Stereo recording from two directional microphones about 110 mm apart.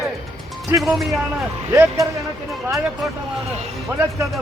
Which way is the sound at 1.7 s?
25° right (ahead or behind).